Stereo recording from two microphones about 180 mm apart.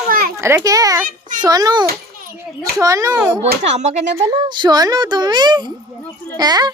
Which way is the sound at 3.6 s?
40° right (ahead or behind).